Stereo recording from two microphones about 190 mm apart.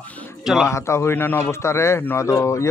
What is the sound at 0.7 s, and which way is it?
Speech, 15° left (ahead or behind).